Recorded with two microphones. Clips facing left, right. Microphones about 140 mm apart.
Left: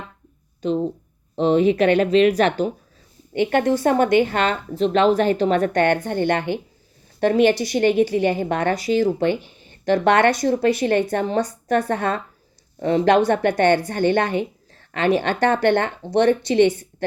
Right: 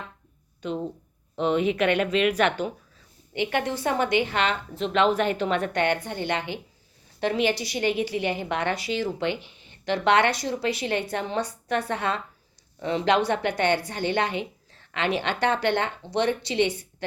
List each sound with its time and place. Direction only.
1.4 s speech: 35° left (ahead or behind)
3.3 s a woman's voice: 50° left (ahead or behind)